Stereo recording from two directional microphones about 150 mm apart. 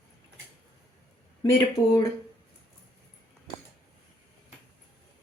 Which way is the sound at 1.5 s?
25° left (ahead or behind).